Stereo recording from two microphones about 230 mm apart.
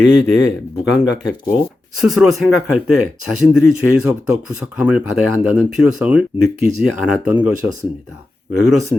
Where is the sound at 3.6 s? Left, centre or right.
Left.